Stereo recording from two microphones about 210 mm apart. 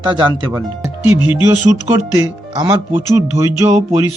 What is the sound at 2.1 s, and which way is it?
Speech, 15° right (ahead or behind).